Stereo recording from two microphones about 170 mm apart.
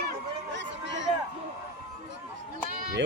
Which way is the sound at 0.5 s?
90° right.